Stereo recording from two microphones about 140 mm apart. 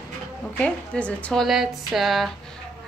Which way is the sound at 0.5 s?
10° left (ahead or behind).